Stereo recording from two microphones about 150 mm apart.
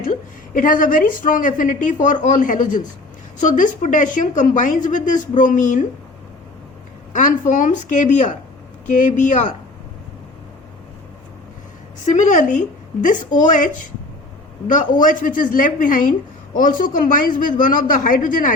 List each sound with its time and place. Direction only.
0.0 s speech: 65° left (ahead or behind)
7.1 s speech: 60° left (ahead or behind)
12.0 s speech: 55° left (ahead or behind)
14.7 s speech: 60° left (ahead or behind)